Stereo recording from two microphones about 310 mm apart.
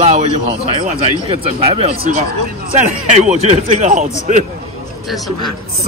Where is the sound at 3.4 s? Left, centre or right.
Right.